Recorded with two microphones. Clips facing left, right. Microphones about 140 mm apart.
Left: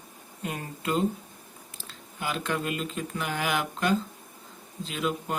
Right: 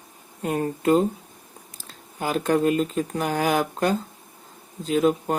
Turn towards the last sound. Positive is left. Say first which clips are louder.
# right 9 dB
turn(degrees=-45)  # may be behind; listen again after turning